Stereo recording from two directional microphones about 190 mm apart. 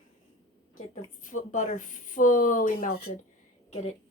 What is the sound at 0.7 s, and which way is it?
A woman's voice, 40° left (ahead or behind).